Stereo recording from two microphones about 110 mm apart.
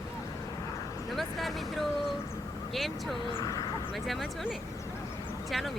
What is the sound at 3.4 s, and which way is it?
Speech, 35° left (ahead or behind).